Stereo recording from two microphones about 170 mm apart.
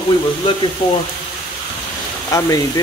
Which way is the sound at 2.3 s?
20° left (ahead or behind).